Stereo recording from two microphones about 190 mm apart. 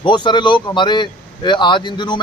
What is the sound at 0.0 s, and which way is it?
A man's voice, 25° left (ahead or behind).